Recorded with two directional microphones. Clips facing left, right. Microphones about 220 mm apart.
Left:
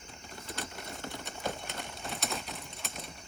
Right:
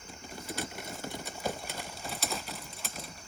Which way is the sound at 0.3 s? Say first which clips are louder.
Right 3 dB; centre (ahead or behind).